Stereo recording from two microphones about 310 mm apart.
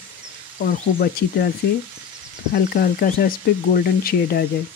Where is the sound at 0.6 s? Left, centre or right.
Left.